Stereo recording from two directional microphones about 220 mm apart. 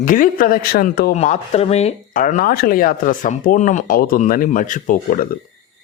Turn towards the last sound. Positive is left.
turn(degrees=35)  # may be behind; listen again after turning